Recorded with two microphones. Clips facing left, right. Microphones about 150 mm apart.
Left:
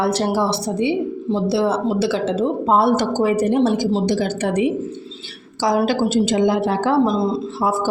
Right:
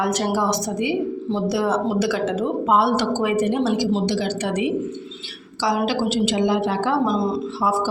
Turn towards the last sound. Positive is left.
turn(degrees=50)  # may be behind; listen again after turning